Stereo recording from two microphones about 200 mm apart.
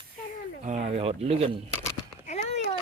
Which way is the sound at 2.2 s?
30° left (ahead or behind).